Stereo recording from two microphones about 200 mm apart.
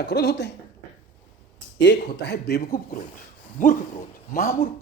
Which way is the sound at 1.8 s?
60° left (ahead or behind).